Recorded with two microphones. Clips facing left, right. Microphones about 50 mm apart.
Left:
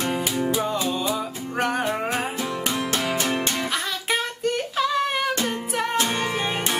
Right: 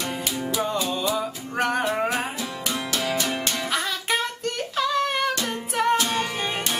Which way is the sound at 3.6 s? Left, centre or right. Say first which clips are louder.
Even; centre.